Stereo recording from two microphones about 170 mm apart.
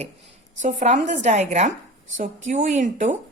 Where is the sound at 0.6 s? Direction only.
45° right (ahead or behind).